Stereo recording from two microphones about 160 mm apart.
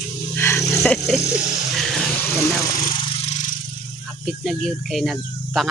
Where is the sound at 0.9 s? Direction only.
Centre (ahead or behind).